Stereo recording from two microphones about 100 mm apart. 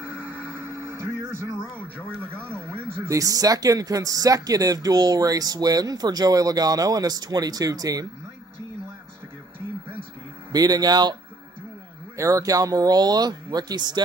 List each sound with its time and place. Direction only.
0.0 s a sound: 20° right (ahead or behind)
2.0 s speech: 20° right (ahead or behind); by 8.1 s 40° right (ahead or behind)
10.5 s speech: 40° right (ahead or behind)
12.2 s speech: 35° right (ahead or behind)